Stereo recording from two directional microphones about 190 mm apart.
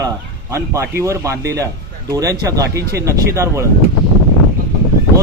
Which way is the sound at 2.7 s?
60° right (ahead or behind).